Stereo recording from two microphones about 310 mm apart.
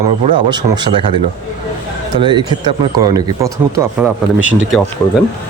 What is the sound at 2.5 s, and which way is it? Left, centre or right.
Speech, centre.